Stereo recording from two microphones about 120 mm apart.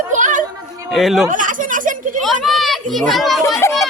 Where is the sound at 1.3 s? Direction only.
90° right.